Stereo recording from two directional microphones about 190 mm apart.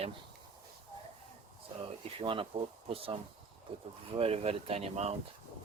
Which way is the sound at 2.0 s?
30° right (ahead or behind).